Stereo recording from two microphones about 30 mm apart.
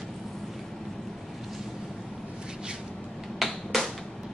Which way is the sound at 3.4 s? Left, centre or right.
Centre.